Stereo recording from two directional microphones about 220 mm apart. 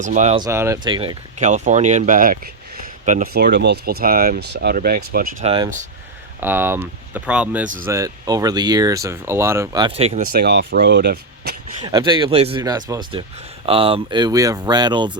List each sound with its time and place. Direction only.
0.0 s speech: 35° right (ahead or behind)
0.3 s speech: 15° right (ahead or behind)
1.4 s speech: 35° right (ahead or behind)
5.4 s speech: 25° right (ahead or behind)
6.4 s speech: 10° right (ahead or behind); by 10.2 s 25° right (ahead or behind)
10.3 s speech: 45° right (ahead or behind)
11.8 s speech: 20° right (ahead or behind)